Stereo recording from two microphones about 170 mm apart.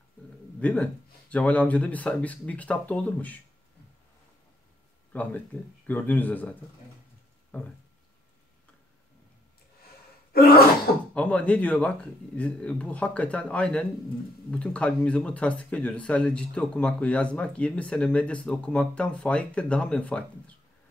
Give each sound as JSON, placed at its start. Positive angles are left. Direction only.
{"t": 0.6, "sound": "a man's voice", "side_deg": 5}
{"t": 5.1, "sound": "speech", "side_deg": 10}
{"t": 7.5, "sound": "speech", "side_deg": 10}
{"t": 10.3, "sound": "throat clearing", "side_deg": 65}
{"t": 11.1, "sound": "speech", "side_deg": 5}